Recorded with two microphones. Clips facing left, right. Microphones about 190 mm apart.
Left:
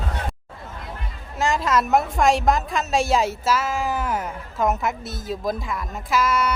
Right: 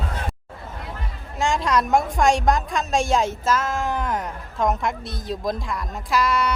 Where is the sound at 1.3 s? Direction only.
Centre (ahead or behind).